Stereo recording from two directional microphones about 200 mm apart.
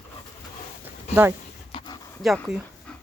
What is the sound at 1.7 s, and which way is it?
Dog, 25° left (ahead or behind).